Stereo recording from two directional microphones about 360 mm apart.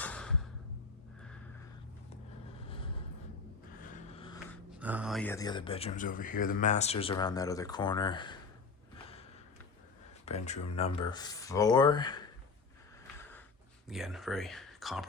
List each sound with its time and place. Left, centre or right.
0.0 s music: centre
2.6 s vehicle: centre
4.8 s speech: centre
10.2 s speech: centre
13.8 s speech: centre